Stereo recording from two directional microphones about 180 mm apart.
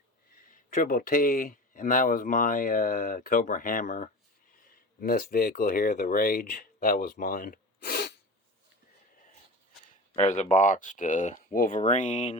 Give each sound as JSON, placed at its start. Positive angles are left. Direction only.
{"t": 0.4, "sound": "speech", "side_deg": 50}
{"t": 10.2, "sound": "speech", "side_deg": 40}